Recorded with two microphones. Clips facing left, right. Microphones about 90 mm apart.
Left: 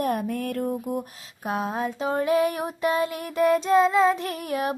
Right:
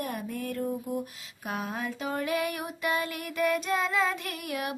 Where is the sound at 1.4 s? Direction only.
35° left (ahead or behind).